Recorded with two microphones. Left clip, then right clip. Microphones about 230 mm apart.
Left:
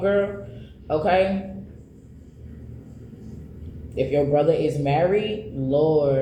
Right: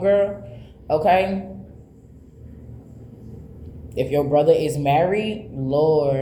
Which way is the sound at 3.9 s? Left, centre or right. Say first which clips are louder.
Right 2 dB; right.